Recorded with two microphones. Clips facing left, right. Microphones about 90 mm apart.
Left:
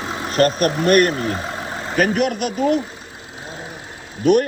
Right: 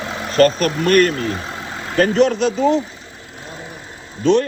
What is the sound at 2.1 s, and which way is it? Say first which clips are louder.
Speech: right 5 dB; 30° right (ahead or behind).